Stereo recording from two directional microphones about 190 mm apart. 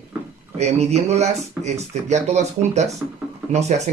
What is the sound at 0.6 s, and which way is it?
Speech, 35° right (ahead or behind).